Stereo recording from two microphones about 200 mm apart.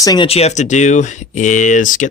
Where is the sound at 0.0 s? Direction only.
20° left (ahead or behind).